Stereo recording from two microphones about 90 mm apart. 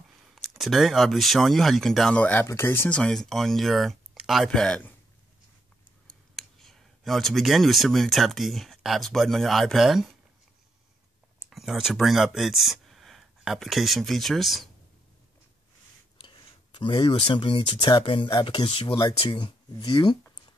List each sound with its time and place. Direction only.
0.3 s speech: centre (ahead or behind); by 2.4 s 15° left (ahead or behind)
2.4 s speech: 25° left (ahead or behind)
2.9 s speech: 10° left (ahead or behind)
4.5 s speech: 10° left (ahead or behind)
6.0 s speech: 5° left (ahead or behind)
11.5 s speech: 5° right (ahead or behind)
16.2 s speech: 65° left (ahead or behind); by 18.9 s 85° left
18.9 s speech: 60° left (ahead or behind)